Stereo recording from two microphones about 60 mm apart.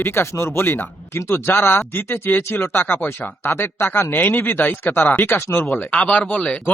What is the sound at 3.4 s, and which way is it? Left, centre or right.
A man's voice, left.